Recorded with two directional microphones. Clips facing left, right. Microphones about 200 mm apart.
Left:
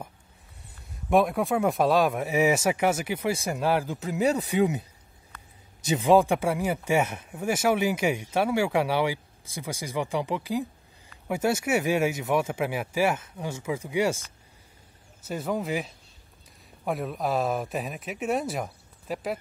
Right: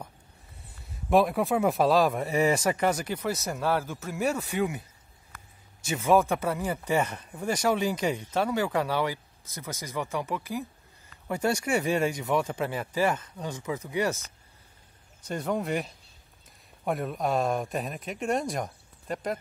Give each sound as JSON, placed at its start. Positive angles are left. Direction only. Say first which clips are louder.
{"t": 0.7, "sound": "speech", "louder": "even", "side_deg": 0}
{"t": 15.2, "sound": "speech", "louder": "even", "side_deg": 5}